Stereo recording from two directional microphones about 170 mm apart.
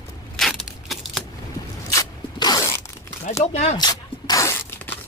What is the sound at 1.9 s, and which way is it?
Zipper, 25° left (ahead or behind).